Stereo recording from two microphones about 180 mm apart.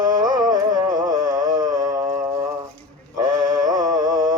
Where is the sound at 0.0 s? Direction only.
20° right (ahead or behind).